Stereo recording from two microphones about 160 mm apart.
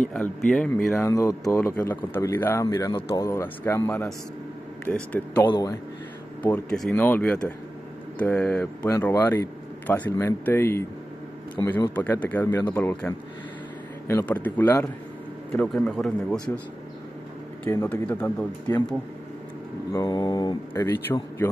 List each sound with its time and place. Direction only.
0.1 s speech: 5° left (ahead or behind)
5.5 s a man's voice: 20° left (ahead or behind)
6.4 s speech: 5° left (ahead or behind)
17.6 s speech: 15° left (ahead or behind)
19.9 s a man's voice: 25° left (ahead or behind)